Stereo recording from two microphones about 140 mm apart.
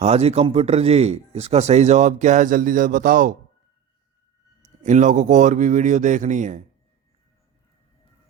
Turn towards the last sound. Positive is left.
turn(degrees=-60)  # may be behind; listen again after turning